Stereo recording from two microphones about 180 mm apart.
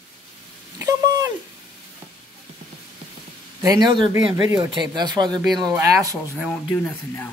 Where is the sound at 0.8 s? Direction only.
20° right (ahead or behind).